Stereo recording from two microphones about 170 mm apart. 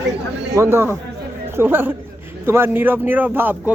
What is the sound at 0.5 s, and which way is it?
Speech, 15° right (ahead or behind).